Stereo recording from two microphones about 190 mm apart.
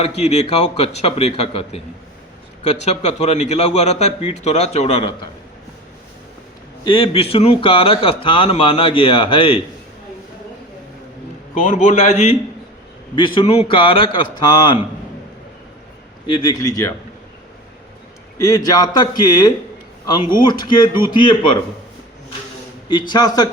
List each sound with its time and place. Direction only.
0.2 s a man's voice: 35° left (ahead or behind)
6.8 s speech: 30° left (ahead or behind)
11.5 s a man's voice: 40° left (ahead or behind)
13.1 s speech: 25° left (ahead or behind)
16.2 s speech: 25° left (ahead or behind)
18.4 s speech: 20° left (ahead or behind)
22.9 s speech: 25° left (ahead or behind)